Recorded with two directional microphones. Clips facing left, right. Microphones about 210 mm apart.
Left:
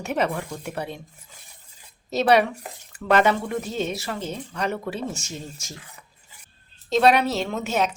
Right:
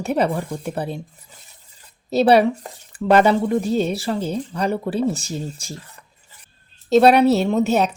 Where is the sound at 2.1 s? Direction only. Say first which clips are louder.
Right 5 dB; 35° right (ahead or behind).